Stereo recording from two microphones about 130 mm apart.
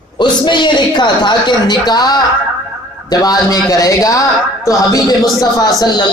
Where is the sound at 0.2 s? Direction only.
35° left (ahead or behind).